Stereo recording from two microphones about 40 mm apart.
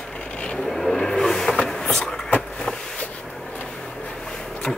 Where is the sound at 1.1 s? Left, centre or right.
Centre.